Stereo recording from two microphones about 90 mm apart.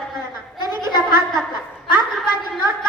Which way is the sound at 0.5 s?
55° left (ahead or behind).